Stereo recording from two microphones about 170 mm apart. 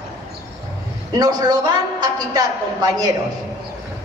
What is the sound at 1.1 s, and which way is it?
A man's voice, 20° right (ahead or behind).